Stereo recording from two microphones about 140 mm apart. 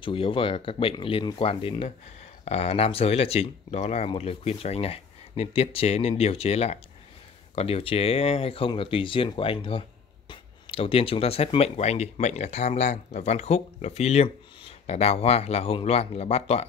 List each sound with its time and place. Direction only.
0.0 s speech: 40° left (ahead or behind)